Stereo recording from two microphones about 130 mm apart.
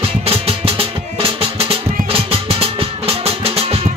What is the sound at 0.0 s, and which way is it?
Music, 45° right (ahead or behind).